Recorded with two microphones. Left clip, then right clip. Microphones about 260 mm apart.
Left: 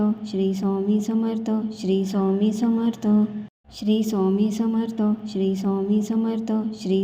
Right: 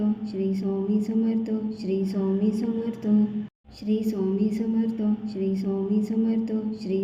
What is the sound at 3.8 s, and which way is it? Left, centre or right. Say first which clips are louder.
A woman's voice: left 4 dB; left.